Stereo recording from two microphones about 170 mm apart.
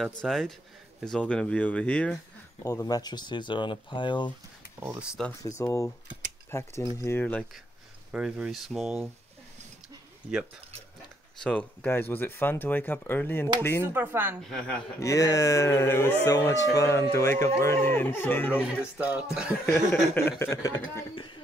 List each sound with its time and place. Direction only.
0.2 s speech: centre (ahead or behind)
2.6 s speech: 20° left (ahead or behind)
4.7 s speech: 5° right (ahead or behind)
5.6 s speech: 15° left (ahead or behind)
8.1 s speech: 5° right (ahead or behind)
11.4 s speech: 10° left (ahead or behind)
13.9 s speech: 10° right (ahead or behind)
15.0 s speech: 20° left (ahead or behind)
18.6 s speech: 5° right (ahead or behind)
20.2 s speech: 15° left (ahead or behind)